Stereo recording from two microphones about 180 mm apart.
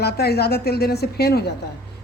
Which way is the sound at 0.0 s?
65° left (ahead or behind).